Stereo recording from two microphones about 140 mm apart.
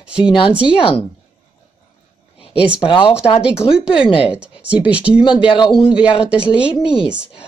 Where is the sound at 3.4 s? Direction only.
5° right (ahead or behind).